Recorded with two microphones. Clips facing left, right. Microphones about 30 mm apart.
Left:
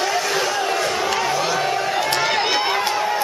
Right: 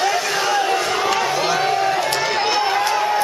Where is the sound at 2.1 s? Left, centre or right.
Centre.